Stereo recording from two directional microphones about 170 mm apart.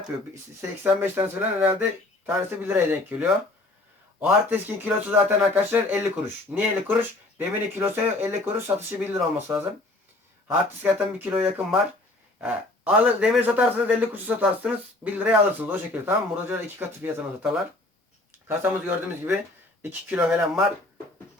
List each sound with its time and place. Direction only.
0.9 s a man's voice: 10° right (ahead or behind)
11.3 s a man's voice: 10° right (ahead or behind)